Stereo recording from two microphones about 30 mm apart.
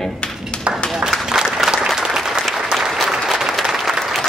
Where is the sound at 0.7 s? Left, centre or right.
Right.